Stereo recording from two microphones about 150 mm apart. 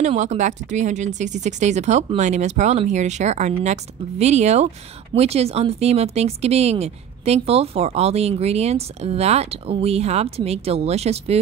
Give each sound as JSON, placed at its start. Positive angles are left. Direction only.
{"t": 0.0, "sound": "speech", "side_deg": -50}